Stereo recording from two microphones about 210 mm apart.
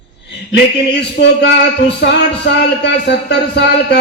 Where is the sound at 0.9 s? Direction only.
50° left (ahead or behind).